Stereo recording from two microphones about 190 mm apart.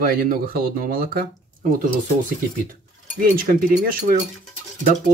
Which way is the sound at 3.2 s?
50° right (ahead or behind).